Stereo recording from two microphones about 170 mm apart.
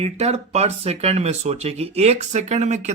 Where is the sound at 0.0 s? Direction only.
40° right (ahead or behind).